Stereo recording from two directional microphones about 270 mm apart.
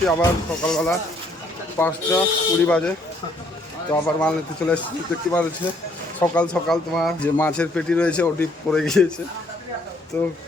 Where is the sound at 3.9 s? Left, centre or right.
Centre.